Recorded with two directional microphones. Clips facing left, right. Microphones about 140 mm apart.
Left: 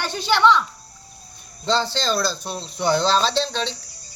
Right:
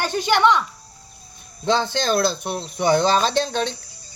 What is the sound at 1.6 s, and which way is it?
Speech, 55° right (ahead or behind).